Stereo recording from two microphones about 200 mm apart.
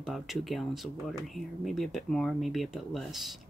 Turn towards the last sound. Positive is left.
turn(degrees=0)  # may be behind; listen again after turning